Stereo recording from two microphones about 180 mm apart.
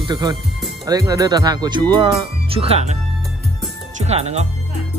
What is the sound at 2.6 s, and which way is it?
Speech, 35° right (ahead or behind).